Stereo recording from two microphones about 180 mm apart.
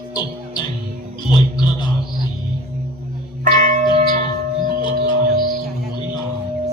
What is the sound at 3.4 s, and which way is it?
Music, 45° right (ahead or behind).